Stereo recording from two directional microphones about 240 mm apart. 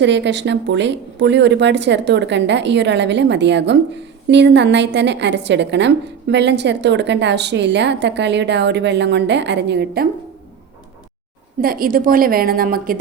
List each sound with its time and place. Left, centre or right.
0.0 s speech: right
11.6 s a woman's voice: right